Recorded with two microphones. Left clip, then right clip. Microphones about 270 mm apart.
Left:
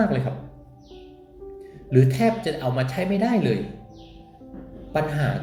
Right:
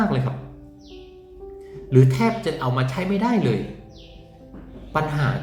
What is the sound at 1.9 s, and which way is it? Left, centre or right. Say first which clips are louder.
Speech: right 1 dB; centre.